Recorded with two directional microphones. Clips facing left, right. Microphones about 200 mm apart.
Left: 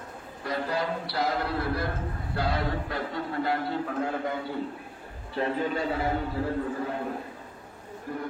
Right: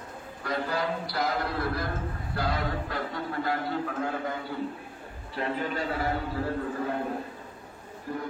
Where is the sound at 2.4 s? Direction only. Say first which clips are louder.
Left 1 dB; 30° left (ahead or behind).